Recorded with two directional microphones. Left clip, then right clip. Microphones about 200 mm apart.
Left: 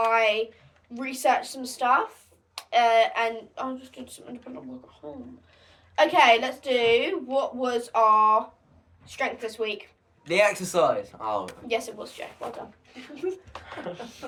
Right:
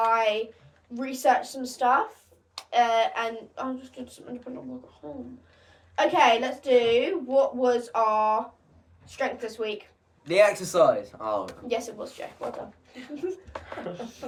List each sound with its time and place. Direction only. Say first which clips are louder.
0.0 s a sound: left 1 dB; 20° left (ahead or behind)
0.9 s a woman's voice: right 1 dB; 20° left (ahead or behind)
10.2 s speech: right 2 dB; 5° left (ahead or behind)
11.7 s a woman's voice: left 1 dB; 20° left (ahead or behind)
13.1 s a woman's voice: left 1 dB; 20° left (ahead or behind)